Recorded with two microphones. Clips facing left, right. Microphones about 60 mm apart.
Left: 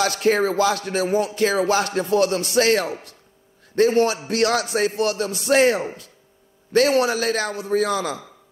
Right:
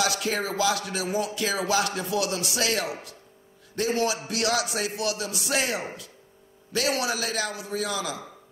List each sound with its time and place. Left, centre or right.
0.0 s music: left